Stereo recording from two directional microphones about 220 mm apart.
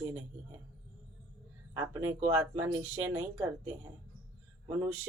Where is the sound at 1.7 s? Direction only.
10° right (ahead or behind).